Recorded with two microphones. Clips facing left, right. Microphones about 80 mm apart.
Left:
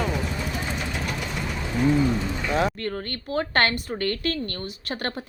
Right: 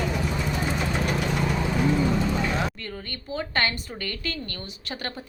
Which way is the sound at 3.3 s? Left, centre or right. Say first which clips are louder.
Left 4 dB; left.